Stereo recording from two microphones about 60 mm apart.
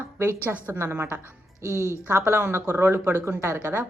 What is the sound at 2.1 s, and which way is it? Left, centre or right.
Speech, right.